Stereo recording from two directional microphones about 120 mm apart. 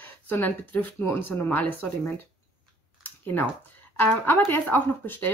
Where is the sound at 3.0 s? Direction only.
15° left (ahead or behind).